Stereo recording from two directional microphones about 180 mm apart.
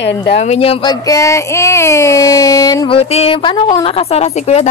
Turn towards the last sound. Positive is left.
turn(degrees=35)  # may be behind; listen again after turning